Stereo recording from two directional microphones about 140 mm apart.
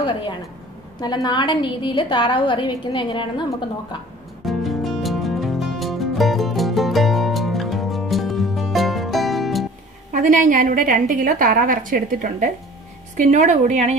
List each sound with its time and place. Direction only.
0.0 s a woman's voice: 35° left (ahead or behind)
4.5 s music: centre (ahead or behind)
10.1 s a woman's voice: 65° right (ahead or behind)